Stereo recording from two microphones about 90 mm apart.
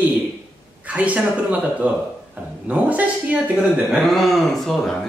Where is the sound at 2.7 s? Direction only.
15° right (ahead or behind).